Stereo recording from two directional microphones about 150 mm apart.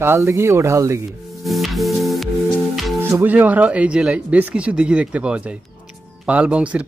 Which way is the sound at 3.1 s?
10° right (ahead or behind).